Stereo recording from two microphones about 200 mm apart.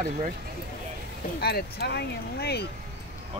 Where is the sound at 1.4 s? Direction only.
50° left (ahead or behind).